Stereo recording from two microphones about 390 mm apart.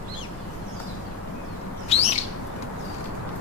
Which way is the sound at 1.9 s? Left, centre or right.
Centre.